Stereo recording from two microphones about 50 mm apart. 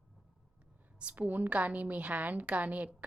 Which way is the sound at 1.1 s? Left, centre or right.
Right.